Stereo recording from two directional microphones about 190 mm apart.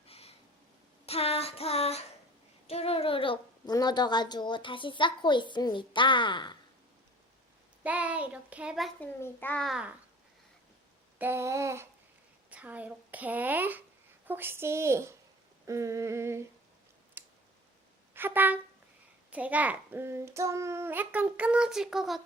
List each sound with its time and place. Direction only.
0.1 s a sound: 30° left (ahead or behind)
1.0 s child singing: 30° left (ahead or behind)
2.6 s a woman's voice: 30° left (ahead or behind)
7.9 s a child's voice: 5° right (ahead or behind)
9.2 s a child's voice: 10° left (ahead or behind)
11.2 s a child's voice: 15° right (ahead or behind)
17.2 s clicking: 10° right (ahead or behind)
18.1 s a sound: 10° right (ahead or behind)
19.3 s a child's voice: 5° right (ahead or behind)